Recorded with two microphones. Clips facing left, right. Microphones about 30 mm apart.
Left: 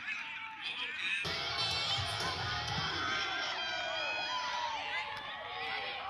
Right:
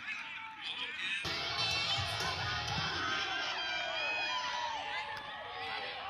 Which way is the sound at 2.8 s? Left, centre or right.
Left.